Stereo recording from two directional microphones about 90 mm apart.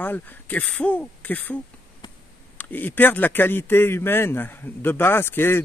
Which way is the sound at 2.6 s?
20° left (ahead or behind).